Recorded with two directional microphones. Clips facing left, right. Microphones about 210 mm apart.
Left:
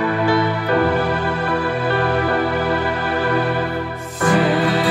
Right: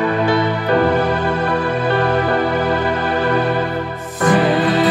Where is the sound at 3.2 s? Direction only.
20° right (ahead or behind).